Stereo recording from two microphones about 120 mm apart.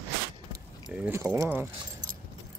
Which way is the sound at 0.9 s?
15° right (ahead or behind).